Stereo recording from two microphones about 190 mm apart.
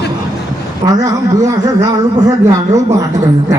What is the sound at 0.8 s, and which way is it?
A man's voice, 15° right (ahead or behind).